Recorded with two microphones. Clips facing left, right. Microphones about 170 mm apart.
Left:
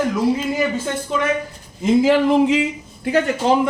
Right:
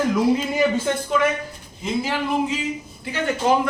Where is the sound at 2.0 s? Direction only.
90° left.